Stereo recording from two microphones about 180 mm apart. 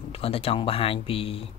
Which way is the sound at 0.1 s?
35° left (ahead or behind).